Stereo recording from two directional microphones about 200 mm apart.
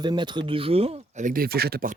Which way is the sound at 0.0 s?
20° right (ahead or behind).